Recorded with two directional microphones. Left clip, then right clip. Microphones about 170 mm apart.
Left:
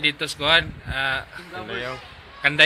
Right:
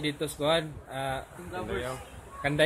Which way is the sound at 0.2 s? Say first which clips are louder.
Left 5 dB; 15° right (ahead or behind).